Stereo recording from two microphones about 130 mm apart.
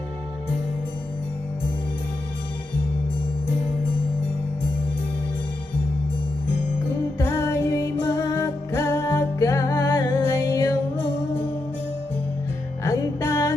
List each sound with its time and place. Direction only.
7.2 s music: 25° left (ahead or behind)
12.8 s music: 25° left (ahead or behind)